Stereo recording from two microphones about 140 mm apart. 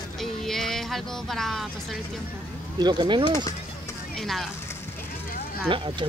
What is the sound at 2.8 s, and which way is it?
Speech, 30° right (ahead or behind).